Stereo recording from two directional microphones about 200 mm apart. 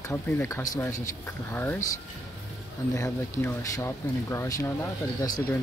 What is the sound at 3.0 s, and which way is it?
Speech, 15° left (ahead or behind).